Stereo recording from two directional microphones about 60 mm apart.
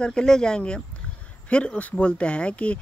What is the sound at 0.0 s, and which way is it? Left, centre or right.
Speech, centre.